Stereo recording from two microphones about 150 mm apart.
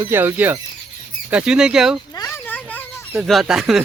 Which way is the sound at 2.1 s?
15° left (ahead or behind).